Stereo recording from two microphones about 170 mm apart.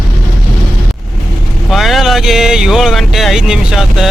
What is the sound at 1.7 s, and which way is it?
Speech, centre (ahead or behind).